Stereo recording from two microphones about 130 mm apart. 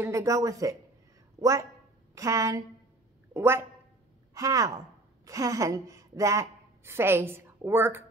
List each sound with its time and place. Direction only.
0.0 s a woman's voice: 25° right (ahead or behind)